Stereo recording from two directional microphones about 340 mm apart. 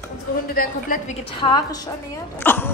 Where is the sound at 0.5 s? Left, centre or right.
Left.